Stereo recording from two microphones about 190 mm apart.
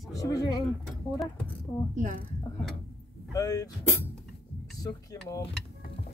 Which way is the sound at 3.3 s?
20° left (ahead or behind).